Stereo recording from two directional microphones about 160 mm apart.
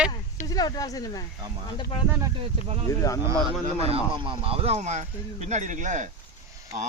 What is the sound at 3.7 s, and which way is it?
Speech, 40° right (ahead or behind).